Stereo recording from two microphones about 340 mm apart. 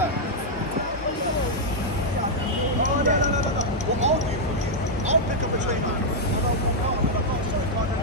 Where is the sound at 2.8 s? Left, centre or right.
Right.